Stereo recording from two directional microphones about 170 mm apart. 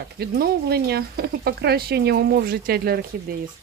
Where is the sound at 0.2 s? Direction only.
65° right (ahead or behind).